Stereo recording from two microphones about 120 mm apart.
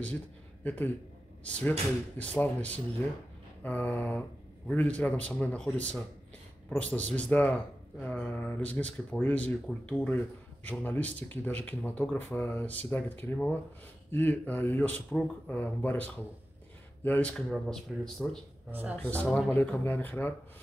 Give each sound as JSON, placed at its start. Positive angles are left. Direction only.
{"t": 1.4, "sound": "speech", "side_deg": 10}
{"t": 17.5, "sound": "speech", "side_deg": 5}
{"t": 18.7, "sound": "speech", "side_deg": -15}
{"t": 18.9, "sound": "speech", "side_deg": 15}
{"t": 19.2, "sound": "speech", "side_deg": 0}
{"t": 19.5, "sound": "speech", "side_deg": 15}